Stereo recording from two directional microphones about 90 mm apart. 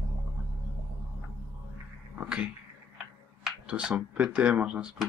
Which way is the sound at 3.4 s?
10° right (ahead or behind).